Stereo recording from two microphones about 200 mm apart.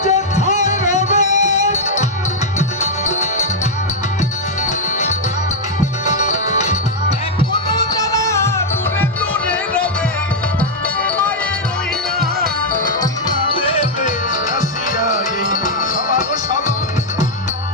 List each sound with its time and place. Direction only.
0.0 s music: 35° left (ahead or behind)
6.1 s music: 35° left (ahead or behind)
7.7 s music: 15° left (ahead or behind)
12.2 s music: 45° right (ahead or behind)
13.2 s music: 25° left (ahead or behind)
14.9 s music: 40° left (ahead or behind)